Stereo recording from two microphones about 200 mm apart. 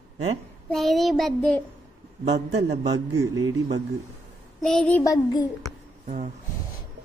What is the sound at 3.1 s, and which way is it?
Speech, 15° right (ahead or behind).